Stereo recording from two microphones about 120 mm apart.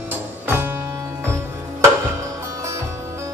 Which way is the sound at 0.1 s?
20° right (ahead or behind).